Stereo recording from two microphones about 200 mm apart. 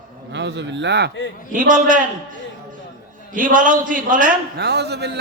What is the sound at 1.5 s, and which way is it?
Speech, 40° right (ahead or behind).